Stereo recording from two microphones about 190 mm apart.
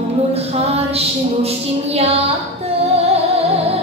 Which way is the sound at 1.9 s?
35° right (ahead or behind).